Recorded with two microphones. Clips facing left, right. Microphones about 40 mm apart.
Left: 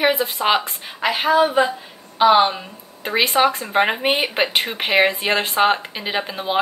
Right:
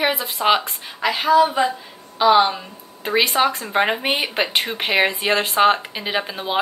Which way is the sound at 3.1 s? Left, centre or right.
Centre.